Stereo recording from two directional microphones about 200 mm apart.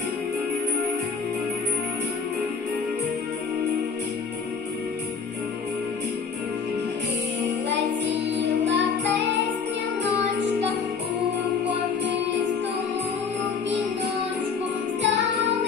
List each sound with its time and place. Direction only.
8.4 s music: 60° right (ahead or behind)
15.0 s music: 60° right (ahead or behind)